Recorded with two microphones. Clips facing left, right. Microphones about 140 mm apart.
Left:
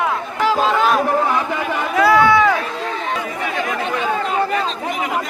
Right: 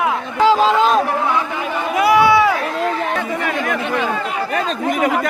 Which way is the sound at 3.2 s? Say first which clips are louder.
Right 2 dB; 60° right (ahead or behind).